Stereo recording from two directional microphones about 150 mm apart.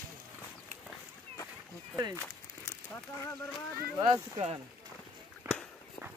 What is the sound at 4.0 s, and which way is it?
Speech, 35° right (ahead or behind).